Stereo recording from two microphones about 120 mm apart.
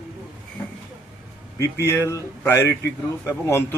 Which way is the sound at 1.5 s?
25° left (ahead or behind).